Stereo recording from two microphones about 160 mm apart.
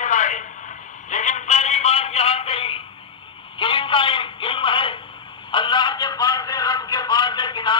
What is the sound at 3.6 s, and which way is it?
Speech, 30° left (ahead or behind).